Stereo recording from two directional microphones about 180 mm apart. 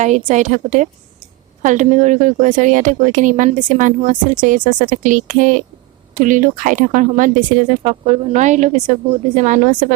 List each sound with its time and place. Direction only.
0.0 s speech: 40° right (ahead or behind)